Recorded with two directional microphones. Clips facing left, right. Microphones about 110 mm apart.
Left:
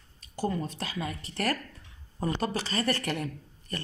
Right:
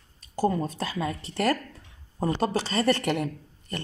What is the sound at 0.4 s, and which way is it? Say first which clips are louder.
Speech: right 6 dB; 40° right (ahead or behind).